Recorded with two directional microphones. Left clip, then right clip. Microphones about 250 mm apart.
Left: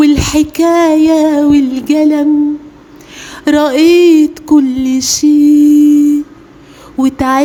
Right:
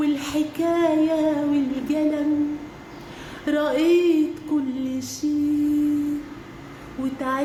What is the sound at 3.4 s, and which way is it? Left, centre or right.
Speech, left.